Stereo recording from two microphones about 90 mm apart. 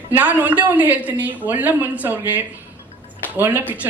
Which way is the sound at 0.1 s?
20° right (ahead or behind).